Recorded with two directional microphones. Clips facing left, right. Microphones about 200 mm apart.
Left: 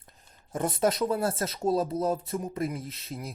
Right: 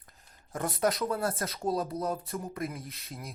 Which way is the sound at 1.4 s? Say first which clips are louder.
Left 4 dB; 25° left (ahead or behind).